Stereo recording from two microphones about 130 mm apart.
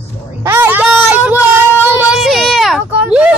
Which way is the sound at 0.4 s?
20° right (ahead or behind).